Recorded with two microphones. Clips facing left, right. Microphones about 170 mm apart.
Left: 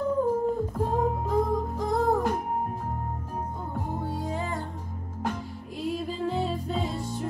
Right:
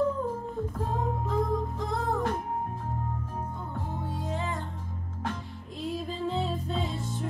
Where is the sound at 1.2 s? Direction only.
40° left (ahead or behind).